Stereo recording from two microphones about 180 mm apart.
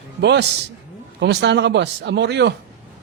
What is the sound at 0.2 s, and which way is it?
Speech, 70° right (ahead or behind).